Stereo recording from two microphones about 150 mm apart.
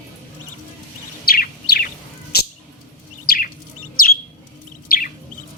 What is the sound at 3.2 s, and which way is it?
Chirp, 90° left.